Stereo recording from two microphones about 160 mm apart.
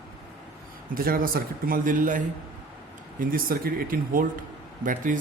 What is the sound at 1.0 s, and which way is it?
Speech, 65° right (ahead or behind).